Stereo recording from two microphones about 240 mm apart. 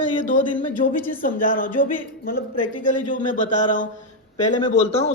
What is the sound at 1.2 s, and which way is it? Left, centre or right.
Speech, left.